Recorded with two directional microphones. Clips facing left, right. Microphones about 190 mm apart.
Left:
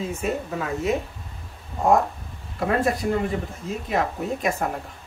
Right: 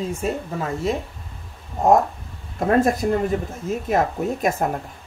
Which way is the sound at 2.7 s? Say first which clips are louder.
Right 5 dB; 45° right (ahead or behind).